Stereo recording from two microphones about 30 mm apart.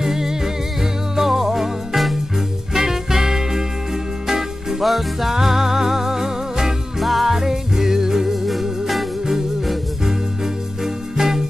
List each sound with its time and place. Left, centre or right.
0.0 s music: centre
4.8 s music: centre
5.3 s music: centre
7.0 s music: centre
7.3 s music: centre
8.5 s music: centre
10.0 s music: centre